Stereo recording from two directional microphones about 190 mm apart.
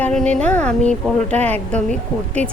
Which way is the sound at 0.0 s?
5° left (ahead or behind).